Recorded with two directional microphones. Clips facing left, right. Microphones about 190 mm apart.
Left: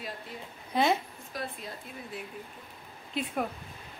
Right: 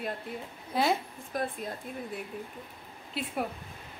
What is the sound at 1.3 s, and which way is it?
Speech, 50° right (ahead or behind).